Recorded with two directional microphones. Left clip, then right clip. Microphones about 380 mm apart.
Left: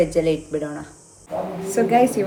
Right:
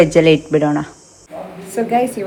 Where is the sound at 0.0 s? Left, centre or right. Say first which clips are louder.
Right 8 dB; centre.